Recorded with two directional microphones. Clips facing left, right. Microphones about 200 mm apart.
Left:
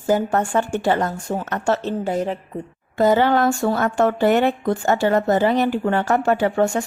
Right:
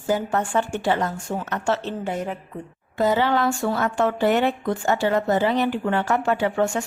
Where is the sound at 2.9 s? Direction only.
50° left (ahead or behind).